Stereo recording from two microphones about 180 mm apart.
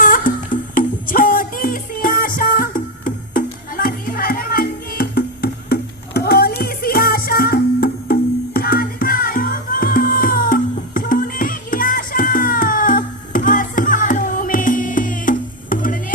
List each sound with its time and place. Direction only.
0.0 s music: 50° left (ahead or behind)